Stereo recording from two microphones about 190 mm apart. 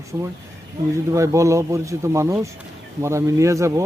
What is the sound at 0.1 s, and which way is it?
Speech, 15° right (ahead or behind).